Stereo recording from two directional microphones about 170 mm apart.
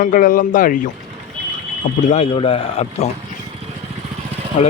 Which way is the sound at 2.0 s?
40° left (ahead or behind).